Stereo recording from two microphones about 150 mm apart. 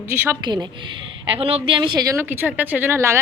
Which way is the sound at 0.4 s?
30° right (ahead or behind).